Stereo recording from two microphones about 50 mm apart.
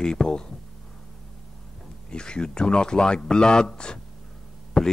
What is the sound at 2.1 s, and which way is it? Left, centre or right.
Speech, centre.